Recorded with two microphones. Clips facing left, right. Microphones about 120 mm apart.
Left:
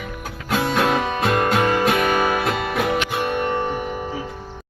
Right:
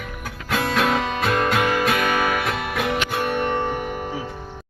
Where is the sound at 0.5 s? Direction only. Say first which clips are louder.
Left 2 dB; 20° left (ahead or behind).